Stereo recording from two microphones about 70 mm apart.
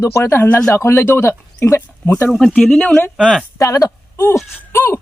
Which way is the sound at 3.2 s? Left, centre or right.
Centre.